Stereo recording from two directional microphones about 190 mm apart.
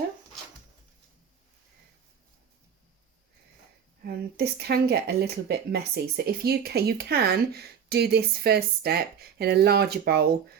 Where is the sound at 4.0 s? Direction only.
55° right (ahead or behind).